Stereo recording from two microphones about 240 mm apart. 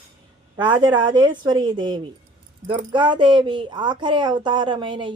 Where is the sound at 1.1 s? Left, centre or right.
Centre.